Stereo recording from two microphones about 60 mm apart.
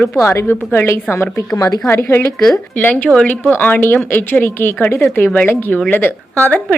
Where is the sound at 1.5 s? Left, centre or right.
Left.